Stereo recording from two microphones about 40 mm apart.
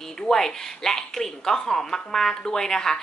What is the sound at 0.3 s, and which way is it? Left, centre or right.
A woman's voice, centre.